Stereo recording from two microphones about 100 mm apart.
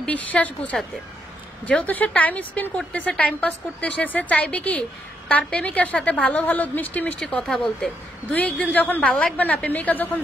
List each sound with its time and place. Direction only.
0.0 s a woman's voice: 15° left (ahead or behind)
7.2 s a woman's voice: 5° left (ahead or behind)